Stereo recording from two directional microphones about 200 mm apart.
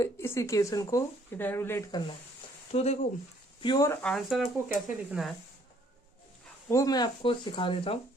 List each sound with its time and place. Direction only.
0.0 s speech: 15° left (ahead or behind)
2.7 s speech: 35° left (ahead or behind)
3.6 s speech: 20° left (ahead or behind)
4.0 s speech: centre (ahead or behind)
6.7 s speech: 15° left (ahead or behind)